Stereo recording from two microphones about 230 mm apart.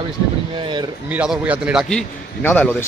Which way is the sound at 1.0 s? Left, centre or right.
Centre.